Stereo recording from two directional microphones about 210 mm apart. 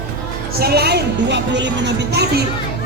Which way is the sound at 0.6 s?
50° right (ahead or behind).